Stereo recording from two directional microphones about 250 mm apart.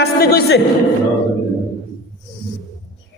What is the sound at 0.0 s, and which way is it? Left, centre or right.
Speech, left.